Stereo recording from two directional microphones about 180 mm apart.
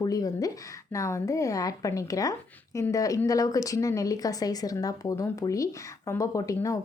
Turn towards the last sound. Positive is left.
turn(degrees=20)  # may be behind; listen again after turning